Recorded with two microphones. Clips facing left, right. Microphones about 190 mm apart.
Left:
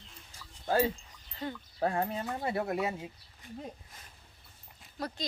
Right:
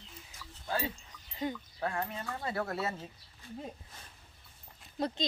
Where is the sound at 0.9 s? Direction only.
15° right (ahead or behind).